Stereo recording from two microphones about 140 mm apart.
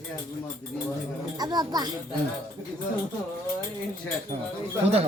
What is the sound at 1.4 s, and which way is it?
Speech, 30° right (ahead or behind).